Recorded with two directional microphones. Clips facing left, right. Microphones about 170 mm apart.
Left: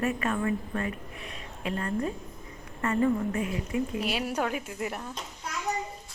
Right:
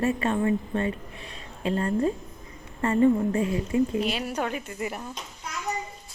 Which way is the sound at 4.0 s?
5° left (ahead or behind).